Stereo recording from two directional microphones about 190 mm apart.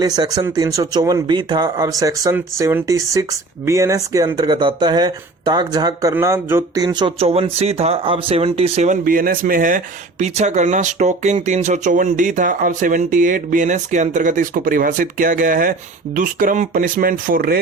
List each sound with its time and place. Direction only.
0.0 s speech: 20° right (ahead or behind)
9.0 s speech: 50° right (ahead or behind)